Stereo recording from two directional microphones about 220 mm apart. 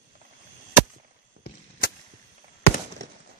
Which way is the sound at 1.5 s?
45° left (ahead or behind).